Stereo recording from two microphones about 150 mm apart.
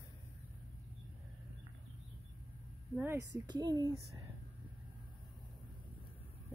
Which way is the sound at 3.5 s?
25° right (ahead or behind).